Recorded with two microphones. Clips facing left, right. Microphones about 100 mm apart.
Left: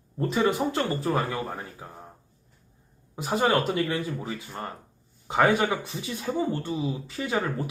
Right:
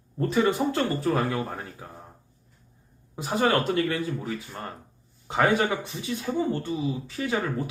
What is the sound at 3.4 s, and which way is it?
Speech, 15° left (ahead or behind).